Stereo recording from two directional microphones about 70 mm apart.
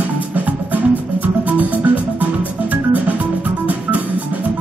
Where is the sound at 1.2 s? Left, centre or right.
Right.